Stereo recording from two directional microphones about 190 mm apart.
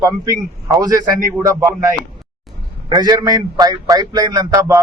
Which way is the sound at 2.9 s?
20° right (ahead or behind).